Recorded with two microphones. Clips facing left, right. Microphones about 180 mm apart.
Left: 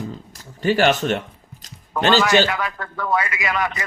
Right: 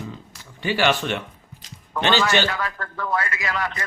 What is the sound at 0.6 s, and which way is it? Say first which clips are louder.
Speech: left 4 dB; 45° left (ahead or behind).